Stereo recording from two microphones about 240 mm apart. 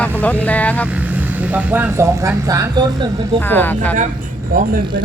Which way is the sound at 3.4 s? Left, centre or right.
Centre.